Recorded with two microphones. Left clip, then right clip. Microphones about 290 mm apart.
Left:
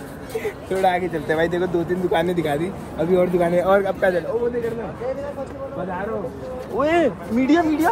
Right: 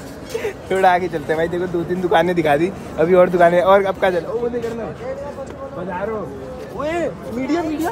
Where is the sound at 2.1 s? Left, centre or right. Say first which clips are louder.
Right 8 dB; centre.